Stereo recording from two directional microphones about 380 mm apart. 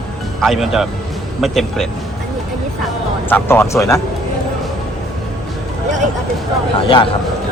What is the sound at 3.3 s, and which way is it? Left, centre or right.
Speech, centre.